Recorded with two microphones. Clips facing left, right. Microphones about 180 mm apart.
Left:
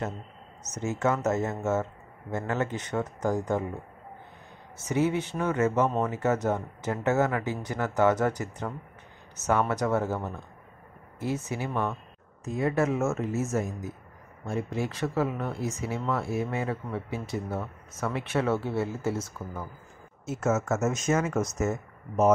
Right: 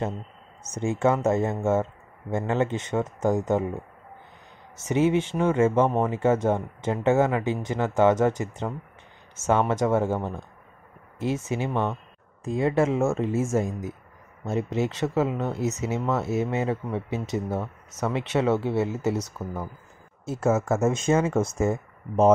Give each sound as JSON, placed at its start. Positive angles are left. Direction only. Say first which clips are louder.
{"t": 0.7, "sound": "speech", "louder": "right 4 dB", "side_deg": -30}
{"t": 4.8, "sound": "speech", "louder": "right 4 dB", "side_deg": -20}
{"t": 20.2, "sound": "speech", "louder": "right 3 dB", "side_deg": -30}